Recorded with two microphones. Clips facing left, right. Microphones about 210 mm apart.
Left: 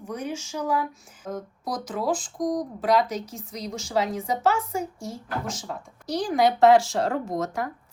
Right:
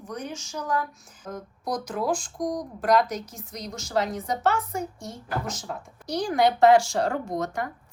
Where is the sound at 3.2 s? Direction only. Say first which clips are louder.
Left 3 dB; 30° left (ahead or behind).